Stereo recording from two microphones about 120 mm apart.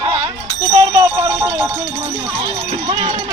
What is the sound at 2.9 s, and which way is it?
Speech, 45° right (ahead or behind).